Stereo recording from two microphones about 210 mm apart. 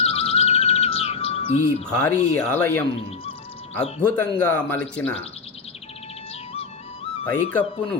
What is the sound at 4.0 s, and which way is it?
Speech, 10° left (ahead or behind).